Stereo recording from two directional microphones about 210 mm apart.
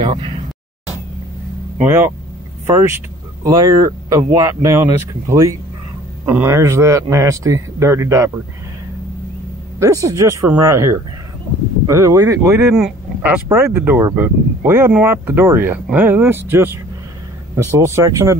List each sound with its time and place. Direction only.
0.0 s speech: 25° right (ahead or behind)
1.8 s speech: 10° right (ahead or behind)
3.4 s speech: 15° right (ahead or behind)
9.8 s speech: 15° right (ahead or behind)
12.7 s speech: 5° right (ahead or behind)